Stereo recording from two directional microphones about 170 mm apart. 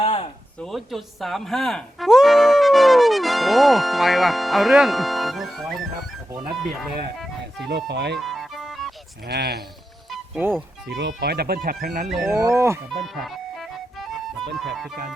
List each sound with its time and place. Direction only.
0.0 s a sound: 40° left (ahead or behind)
0.6 s speech: centre (ahead or behind)
7.7 s speech: 90° right
8.2 s music: centre (ahead or behind)
9.2 s speech: 70° right (ahead or behind)
10.1 s music: 10° right (ahead or behind)
10.8 s speech: 90° right; by 12.0 s 55° right (ahead or behind)
12.0 s speech: centre (ahead or behind)
12.3 s speech: 15° right (ahead or behind)
12.9 s music: centre (ahead or behind)
14.5 s speech: centre (ahead or behind)